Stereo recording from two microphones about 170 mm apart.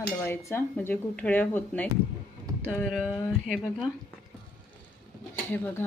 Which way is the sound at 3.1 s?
15° left (ahead or behind).